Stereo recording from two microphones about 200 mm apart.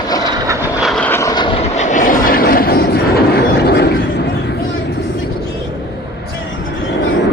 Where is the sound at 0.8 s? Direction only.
5° left (ahead or behind); by 4.5 s 55° left (ahead or behind).